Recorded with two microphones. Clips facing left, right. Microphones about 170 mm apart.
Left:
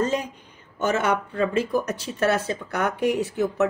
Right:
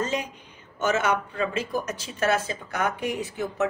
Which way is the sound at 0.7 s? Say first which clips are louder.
Left 1 dB; 55° left (ahead or behind).